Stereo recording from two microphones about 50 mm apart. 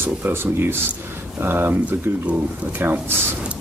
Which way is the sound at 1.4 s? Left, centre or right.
Right.